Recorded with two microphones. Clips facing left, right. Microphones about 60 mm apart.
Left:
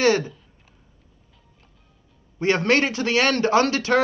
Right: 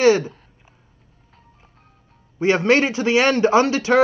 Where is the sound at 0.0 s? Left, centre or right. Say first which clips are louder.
Right 4 dB; centre.